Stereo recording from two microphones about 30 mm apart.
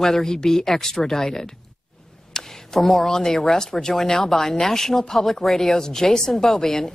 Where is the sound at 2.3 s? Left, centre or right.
Left.